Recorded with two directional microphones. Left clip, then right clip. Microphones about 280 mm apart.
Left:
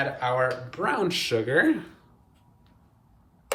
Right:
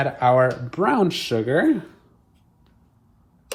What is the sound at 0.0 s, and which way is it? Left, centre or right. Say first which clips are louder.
Speech: right 7 dB; centre.